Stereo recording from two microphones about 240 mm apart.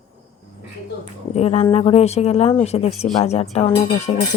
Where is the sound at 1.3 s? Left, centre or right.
Left.